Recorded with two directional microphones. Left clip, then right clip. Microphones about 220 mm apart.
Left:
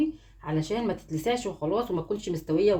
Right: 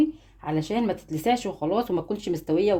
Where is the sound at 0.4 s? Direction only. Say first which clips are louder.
Right 3 dB; 45° right (ahead or behind).